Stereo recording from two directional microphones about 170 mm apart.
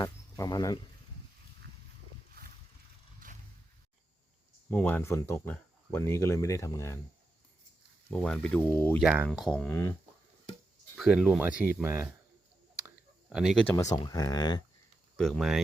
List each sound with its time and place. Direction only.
0.0 s a sound: 20° left (ahead or behind)
4.7 s speech: 10° left (ahead or behind)
8.1 s speech: 5° left (ahead or behind)
9.0 s speech: 10° right (ahead or behind); by 9.9 s 10° left (ahead or behind)
10.9 s speech: 5° right (ahead or behind)
13.3 s speech: centre (ahead or behind)
13.7 s speech: 20° left (ahead or behind)
15.1 s speech: 5° left (ahead or behind)